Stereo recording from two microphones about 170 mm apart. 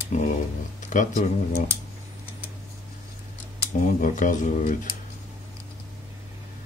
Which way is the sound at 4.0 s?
50° left (ahead or behind).